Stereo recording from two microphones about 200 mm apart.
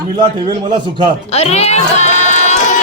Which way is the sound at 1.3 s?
30° left (ahead or behind).